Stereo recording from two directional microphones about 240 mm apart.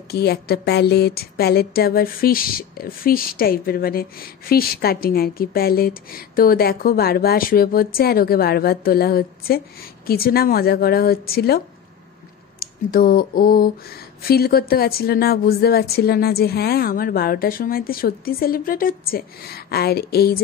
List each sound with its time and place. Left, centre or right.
0.1 s a woman's voice: left